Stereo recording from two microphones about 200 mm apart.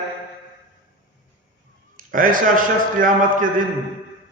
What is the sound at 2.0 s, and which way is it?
A man's voice, 45° right (ahead or behind).